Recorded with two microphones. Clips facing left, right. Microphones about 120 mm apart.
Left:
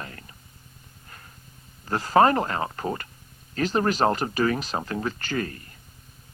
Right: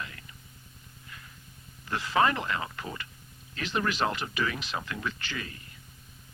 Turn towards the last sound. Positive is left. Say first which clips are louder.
# left 10 dB
turn(degrees=45)  # may be behind; listen again after turning